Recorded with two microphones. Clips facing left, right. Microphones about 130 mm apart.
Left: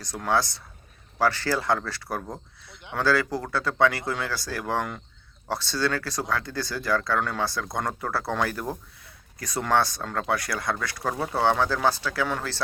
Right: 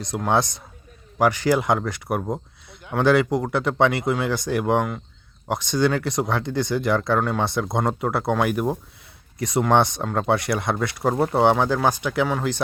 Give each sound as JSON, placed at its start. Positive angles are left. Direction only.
{"t": 0.3, "sound": "speech", "side_deg": -20}